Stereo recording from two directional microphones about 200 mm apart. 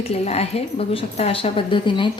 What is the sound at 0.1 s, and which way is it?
A woman's voice, 30° left (ahead or behind).